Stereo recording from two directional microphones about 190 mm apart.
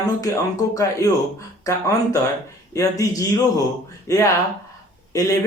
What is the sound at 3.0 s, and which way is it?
Speech, 15° left (ahead or behind).